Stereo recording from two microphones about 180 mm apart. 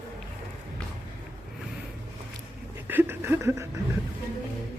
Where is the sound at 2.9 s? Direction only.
10° right (ahead or behind).